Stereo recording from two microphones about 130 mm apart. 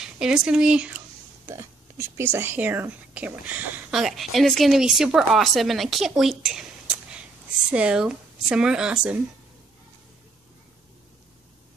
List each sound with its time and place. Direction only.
0.0 s speech: 5° right (ahead or behind)
1.4 s speech: 20° right (ahead or behind)
4.0 s a woman's voice: centre (ahead or behind)
7.7 s speech: 5° right (ahead or behind)